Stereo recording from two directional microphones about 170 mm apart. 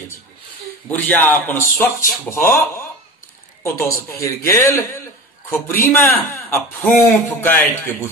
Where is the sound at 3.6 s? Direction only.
15° left (ahead or behind).